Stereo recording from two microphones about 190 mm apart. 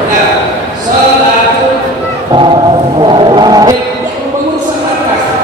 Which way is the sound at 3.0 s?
25° right (ahead or behind).